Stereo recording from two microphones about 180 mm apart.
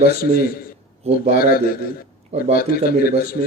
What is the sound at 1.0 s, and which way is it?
Speech, 35° right (ahead or behind).